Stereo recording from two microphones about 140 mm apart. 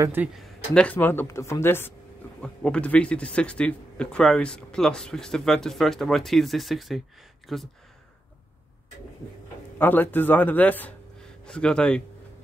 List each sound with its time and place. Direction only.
0.0 s speech: 15° right (ahead or behind)
0.3 s speech: 5° left (ahead or behind)
9.8 s speech: 15° left (ahead or behind)